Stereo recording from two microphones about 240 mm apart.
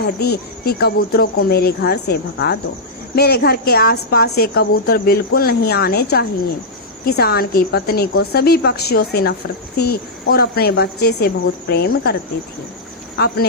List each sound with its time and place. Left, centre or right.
0.0 s a woman's voice: left
13.1 s speech: left